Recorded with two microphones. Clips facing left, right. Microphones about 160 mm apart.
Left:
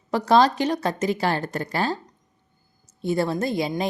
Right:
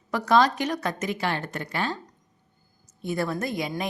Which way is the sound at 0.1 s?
30° left (ahead or behind).